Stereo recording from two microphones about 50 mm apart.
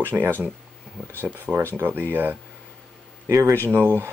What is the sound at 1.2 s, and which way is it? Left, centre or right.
Speech, right.